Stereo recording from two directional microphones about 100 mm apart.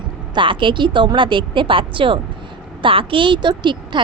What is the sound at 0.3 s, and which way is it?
A woman's voice, 55° right (ahead or behind).